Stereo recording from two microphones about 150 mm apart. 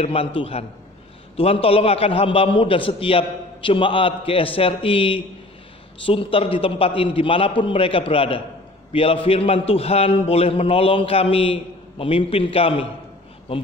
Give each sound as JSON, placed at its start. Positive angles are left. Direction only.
{"t": 0.0, "sound": "a man's voice", "side_deg": 40}